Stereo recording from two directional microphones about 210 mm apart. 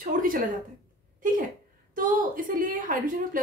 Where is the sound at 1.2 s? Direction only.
40° right (ahead or behind).